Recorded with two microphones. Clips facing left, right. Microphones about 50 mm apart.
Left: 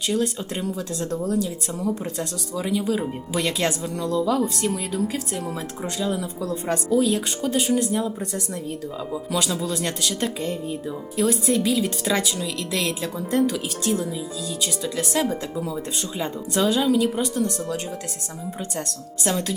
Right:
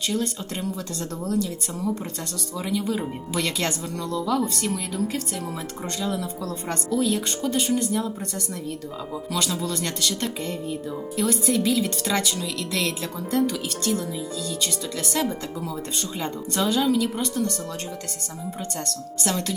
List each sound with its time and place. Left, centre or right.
0.1 s speech: centre
2.6 s speech: centre
9.6 s speech: centre
18.9 s speech: centre